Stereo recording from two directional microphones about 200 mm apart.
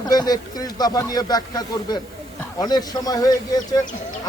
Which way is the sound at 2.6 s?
20° left (ahead or behind).